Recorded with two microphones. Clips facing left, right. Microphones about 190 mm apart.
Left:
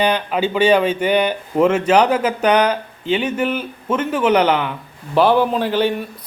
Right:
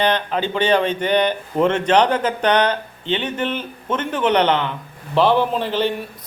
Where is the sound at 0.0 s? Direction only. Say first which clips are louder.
Left 2 dB; 10° left (ahead or behind).